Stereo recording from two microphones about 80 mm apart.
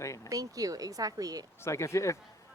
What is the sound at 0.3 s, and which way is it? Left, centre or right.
Speech, right.